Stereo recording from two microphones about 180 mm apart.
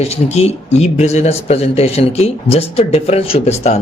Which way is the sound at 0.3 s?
35° left (ahead or behind).